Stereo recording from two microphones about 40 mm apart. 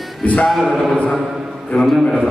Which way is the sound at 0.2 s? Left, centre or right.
Left.